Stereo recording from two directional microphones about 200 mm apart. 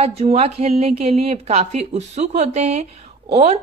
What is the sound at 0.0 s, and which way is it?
A woman's voice, 30° right (ahead or behind).